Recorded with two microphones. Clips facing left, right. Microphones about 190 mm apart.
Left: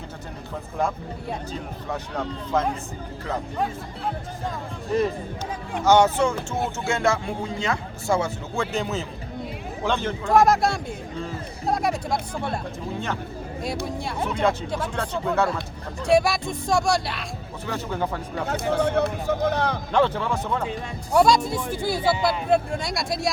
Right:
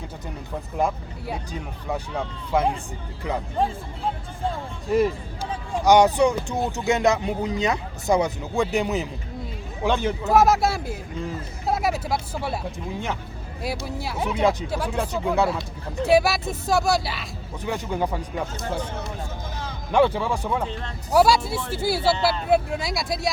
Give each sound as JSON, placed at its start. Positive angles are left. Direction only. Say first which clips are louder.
{"t": 1.9, "sound": "speech", "louder": "right 1 dB", "side_deg": -10}
{"t": 5.8, "sound": "speech", "louder": "right 2 dB", "side_deg": -15}
{"t": 13.8, "sound": "speech", "louder": "even", "side_deg": -5}
{"t": 17.7, "sound": "speech", "louder": "right 2 dB", "side_deg": -15}
{"t": 18.4, "sound": "speech", "louder": "left 7 dB", "side_deg": 65}
{"t": 19.9, "sound": "speech", "louder": "right 4 dB", "side_deg": -10}